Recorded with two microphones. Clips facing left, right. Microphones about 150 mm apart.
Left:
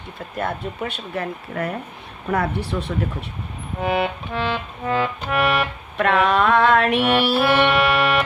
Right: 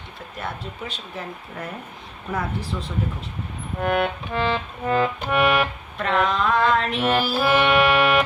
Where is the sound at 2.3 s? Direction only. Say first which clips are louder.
Left 5 dB; 70° left (ahead or behind).